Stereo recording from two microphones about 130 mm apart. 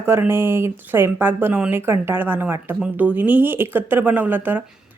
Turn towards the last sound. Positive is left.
turn(degrees=-15)  # may be behind; listen again after turning